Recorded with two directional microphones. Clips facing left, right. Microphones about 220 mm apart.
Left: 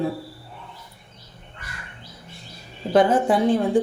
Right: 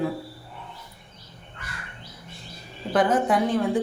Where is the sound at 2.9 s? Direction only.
25° left (ahead or behind).